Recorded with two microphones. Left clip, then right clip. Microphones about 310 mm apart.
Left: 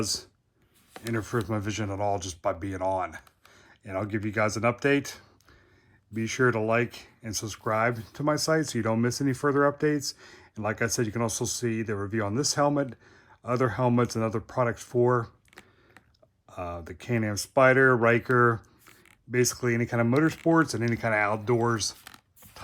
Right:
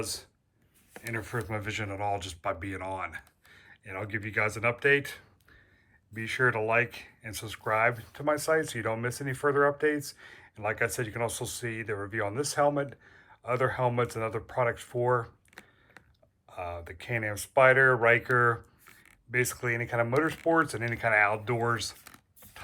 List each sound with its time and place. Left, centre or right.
0.0 s speech: left
16.5 s speech: centre